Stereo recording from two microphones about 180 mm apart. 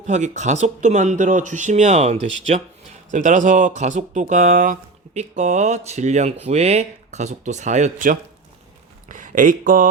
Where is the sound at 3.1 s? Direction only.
45° right (ahead or behind).